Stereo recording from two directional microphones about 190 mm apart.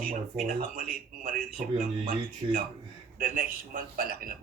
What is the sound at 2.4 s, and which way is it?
Speech, 30° right (ahead or behind).